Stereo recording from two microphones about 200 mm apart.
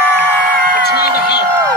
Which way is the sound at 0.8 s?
55° left (ahead or behind).